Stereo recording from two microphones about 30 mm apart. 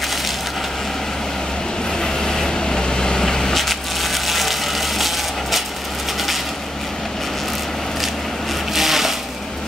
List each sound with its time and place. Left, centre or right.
2.0 s vehicle: centre
3.5 s crushing: centre
8.7 s sewing machine: centre